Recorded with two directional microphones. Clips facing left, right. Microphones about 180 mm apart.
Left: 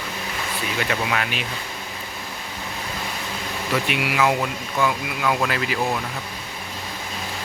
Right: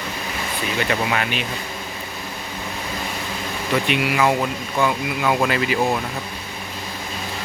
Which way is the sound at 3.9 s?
5° left (ahead or behind).